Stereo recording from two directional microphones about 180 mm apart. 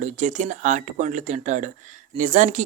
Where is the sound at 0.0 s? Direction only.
45° right (ahead or behind).